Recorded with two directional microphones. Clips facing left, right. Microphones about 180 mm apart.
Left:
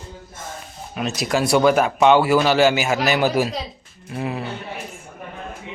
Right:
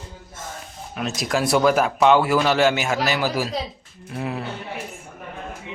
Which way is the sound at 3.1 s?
20° left (ahead or behind).